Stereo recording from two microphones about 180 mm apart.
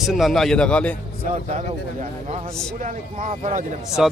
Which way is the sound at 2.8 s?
45° right (ahead or behind).